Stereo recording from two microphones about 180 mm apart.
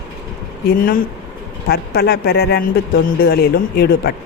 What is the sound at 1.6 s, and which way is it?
A woman's voice, 60° left (ahead or behind).